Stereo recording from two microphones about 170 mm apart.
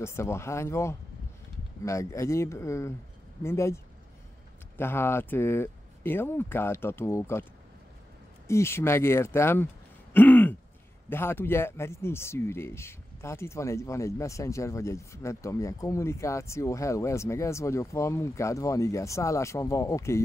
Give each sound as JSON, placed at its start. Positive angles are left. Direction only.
{"t": 0.0, "sound": "speech", "side_deg": 15}
{"t": 8.5, "sound": "speech", "side_deg": 15}
{"t": 10.1, "sound": "throat clearing", "side_deg": 10}
{"t": 11.1, "sound": "speech", "side_deg": 15}